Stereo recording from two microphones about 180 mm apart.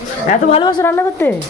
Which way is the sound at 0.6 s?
15° left (ahead or behind).